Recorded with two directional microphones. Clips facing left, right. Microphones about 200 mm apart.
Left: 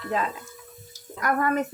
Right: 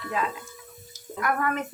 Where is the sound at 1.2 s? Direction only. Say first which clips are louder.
Left 2 dB; 35° left (ahead or behind).